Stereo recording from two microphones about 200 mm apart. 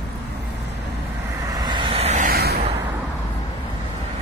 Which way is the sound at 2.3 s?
50° right (ahead or behind).